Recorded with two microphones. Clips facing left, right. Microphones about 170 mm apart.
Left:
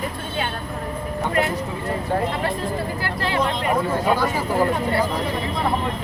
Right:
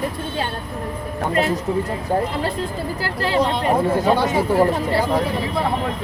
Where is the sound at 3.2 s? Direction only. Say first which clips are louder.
Right 4 dB; 30° right (ahead or behind).